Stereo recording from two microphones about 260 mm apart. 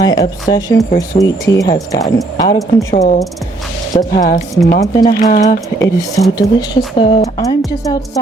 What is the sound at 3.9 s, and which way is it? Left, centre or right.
Speech, centre.